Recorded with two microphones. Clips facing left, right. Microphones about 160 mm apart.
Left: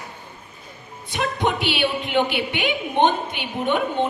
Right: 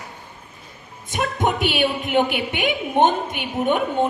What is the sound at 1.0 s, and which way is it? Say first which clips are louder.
A woman's voice: right 1 dB; 45° right (ahead or behind).